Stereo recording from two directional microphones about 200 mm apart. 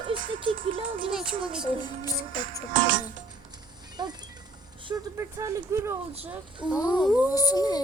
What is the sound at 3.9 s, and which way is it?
Mechanisms, 20° right (ahead or behind).